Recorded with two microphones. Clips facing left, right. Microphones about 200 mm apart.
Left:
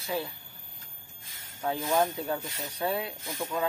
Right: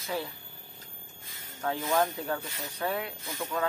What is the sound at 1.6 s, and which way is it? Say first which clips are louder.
Speech: left 1 dB; 10° left (ahead or behind).